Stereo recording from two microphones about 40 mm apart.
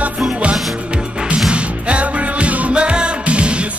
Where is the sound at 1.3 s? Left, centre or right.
Right.